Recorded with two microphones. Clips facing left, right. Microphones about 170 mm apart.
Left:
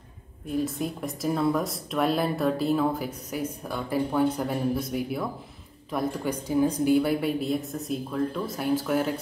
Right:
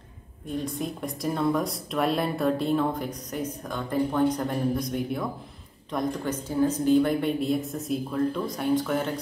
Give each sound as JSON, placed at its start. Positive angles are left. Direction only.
{"t": 0.5, "sound": "speech", "side_deg": 5}